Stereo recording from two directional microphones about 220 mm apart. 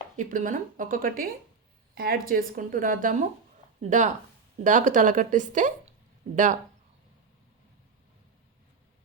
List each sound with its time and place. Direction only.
0.2 s speech: 35° right (ahead or behind)